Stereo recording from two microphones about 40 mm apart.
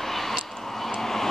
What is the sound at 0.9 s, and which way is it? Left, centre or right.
Vehicle, centre.